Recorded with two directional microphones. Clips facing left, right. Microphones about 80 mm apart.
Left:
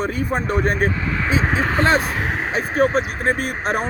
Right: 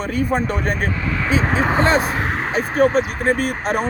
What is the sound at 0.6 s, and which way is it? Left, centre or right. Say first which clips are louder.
Speech: left 3 dB; left.